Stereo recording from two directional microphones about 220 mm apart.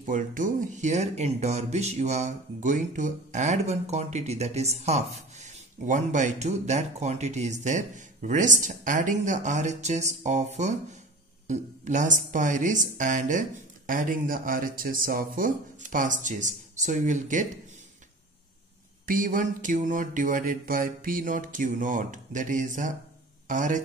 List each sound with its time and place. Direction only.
0.0 s speech: 35° right (ahead or behind)
19.0 s speech: 40° right (ahead or behind)